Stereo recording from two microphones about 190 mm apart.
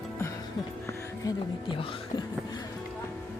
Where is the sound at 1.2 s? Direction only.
25° left (ahead or behind).